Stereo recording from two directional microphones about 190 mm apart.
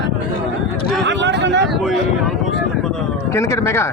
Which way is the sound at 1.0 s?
70° right (ahead or behind).